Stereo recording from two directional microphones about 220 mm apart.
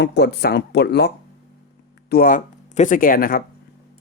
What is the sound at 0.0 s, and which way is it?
Speech, 50° left (ahead or behind).